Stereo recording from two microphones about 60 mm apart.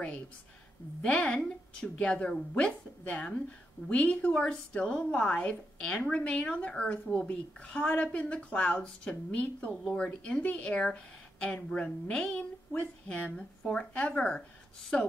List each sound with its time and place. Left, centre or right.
1.0 s a woman's voice: centre